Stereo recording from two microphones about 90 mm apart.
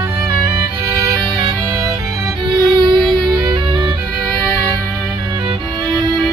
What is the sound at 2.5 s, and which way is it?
Music, 55° right (ahead or behind).